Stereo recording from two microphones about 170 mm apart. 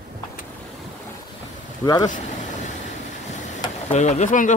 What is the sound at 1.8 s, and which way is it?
Speech, 20° left (ahead or behind).